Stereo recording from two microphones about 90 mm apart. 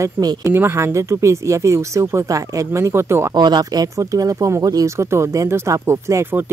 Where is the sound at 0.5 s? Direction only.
25° right (ahead or behind).